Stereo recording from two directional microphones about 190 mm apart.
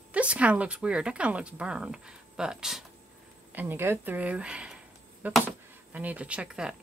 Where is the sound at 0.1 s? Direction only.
5° right (ahead or behind).